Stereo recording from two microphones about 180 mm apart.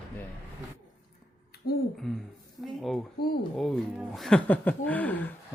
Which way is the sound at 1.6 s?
60° left (ahead or behind).